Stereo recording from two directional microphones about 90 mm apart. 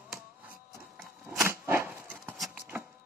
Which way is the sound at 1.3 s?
25° right (ahead or behind).